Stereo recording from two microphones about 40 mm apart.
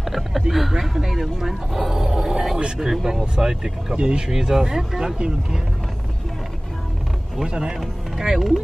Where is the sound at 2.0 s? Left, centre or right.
Centre.